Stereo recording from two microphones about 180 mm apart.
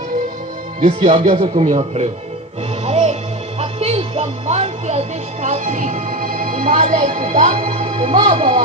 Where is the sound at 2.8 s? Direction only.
40° right (ahead or behind).